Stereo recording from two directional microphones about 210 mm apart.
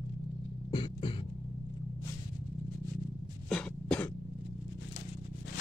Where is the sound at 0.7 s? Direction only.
25° left (ahead or behind).